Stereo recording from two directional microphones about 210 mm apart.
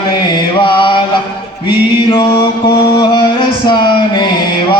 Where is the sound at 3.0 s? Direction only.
20° left (ahead or behind).